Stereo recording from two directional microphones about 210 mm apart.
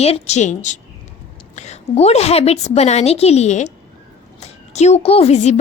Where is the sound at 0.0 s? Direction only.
30° left (ahead or behind).